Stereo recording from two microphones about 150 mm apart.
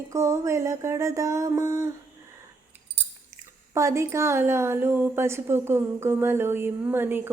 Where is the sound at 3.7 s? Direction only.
20° right (ahead or behind).